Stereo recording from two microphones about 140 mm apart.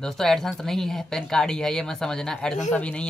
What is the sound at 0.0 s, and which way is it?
Speech, centre (ahead or behind).